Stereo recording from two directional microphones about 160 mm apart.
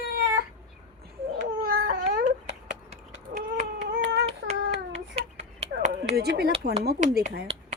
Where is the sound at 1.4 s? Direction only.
80° right.